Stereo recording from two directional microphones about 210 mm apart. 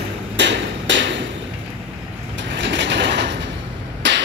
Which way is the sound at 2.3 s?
60° right (ahead or behind).